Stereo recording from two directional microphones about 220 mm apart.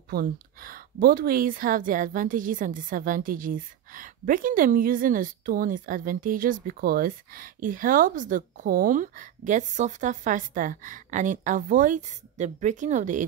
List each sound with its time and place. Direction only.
0.1 s speech: 40° right (ahead or behind)